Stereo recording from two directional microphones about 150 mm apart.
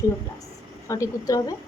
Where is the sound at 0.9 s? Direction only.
20° left (ahead or behind).